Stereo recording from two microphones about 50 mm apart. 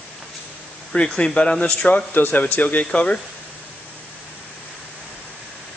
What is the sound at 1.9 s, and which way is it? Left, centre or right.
Speech, left.